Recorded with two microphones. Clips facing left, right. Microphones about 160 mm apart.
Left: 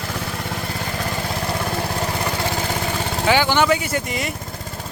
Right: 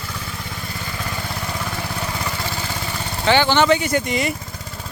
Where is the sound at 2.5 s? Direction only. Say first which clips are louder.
Left 4 dB; 50° left (ahead or behind).